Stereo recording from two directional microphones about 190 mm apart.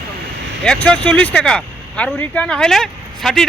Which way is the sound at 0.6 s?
5° left (ahead or behind).